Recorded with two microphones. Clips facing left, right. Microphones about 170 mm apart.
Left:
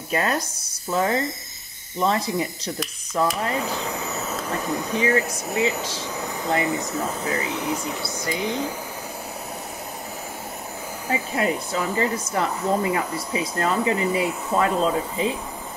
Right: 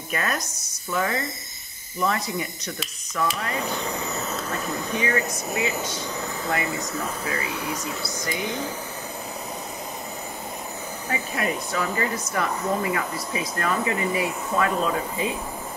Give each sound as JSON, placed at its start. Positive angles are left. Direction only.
{"t": 0.1, "sound": "speech", "side_deg": 30}
{"t": 3.6, "sound": "speech", "side_deg": 5}
{"t": 4.9, "sound": "speech", "side_deg": 30}
{"t": 5.8, "sound": "speech", "side_deg": 0}
{"t": 6.5, "sound": "speech", "side_deg": 25}
{"t": 11.1, "sound": "speech", "side_deg": 25}